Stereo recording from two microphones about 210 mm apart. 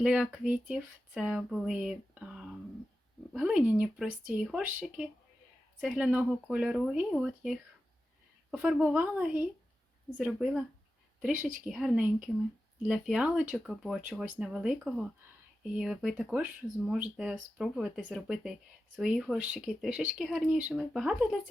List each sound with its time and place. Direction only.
0.0 s speech: 5° right (ahead or behind)
11.6 s speech: centre (ahead or behind)